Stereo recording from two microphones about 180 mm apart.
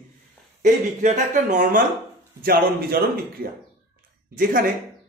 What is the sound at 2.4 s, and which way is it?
A man's voice, 55° right (ahead or behind).